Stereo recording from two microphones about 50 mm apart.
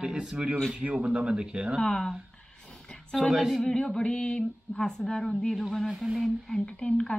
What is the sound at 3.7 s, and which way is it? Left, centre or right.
Speech, centre.